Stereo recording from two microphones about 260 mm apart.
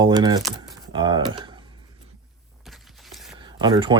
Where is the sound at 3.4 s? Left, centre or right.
Centre.